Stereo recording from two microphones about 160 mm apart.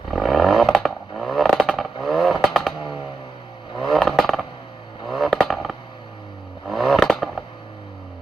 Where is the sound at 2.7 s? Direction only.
30° left (ahead or behind).